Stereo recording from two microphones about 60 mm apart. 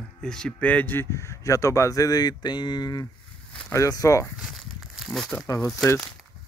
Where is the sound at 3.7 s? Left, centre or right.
Left.